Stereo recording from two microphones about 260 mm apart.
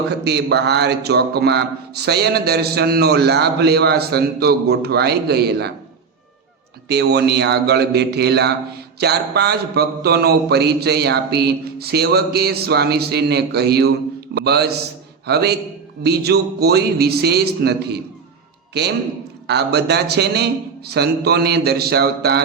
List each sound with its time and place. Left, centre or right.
0.3 s speech: right
6.8 s speech: right